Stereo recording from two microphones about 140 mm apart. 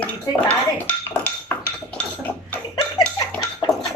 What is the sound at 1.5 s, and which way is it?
Cutlery, 15° left (ahead or behind).